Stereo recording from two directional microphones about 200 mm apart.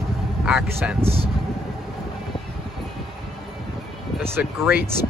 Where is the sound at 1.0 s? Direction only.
30° right (ahead or behind).